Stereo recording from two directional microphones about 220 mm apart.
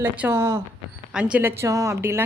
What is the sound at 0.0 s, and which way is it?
A woman's voice, 10° right (ahead or behind).